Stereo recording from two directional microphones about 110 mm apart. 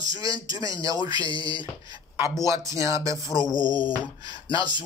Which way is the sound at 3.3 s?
40° left (ahead or behind).